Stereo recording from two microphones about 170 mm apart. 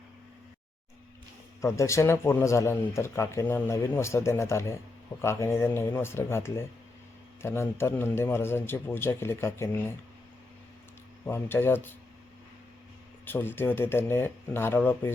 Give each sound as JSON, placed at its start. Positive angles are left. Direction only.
{"t": 1.6, "sound": "speech", "side_deg": 15}
{"t": 11.3, "sound": "speech", "side_deg": 15}
{"t": 13.2, "sound": "speech", "side_deg": 10}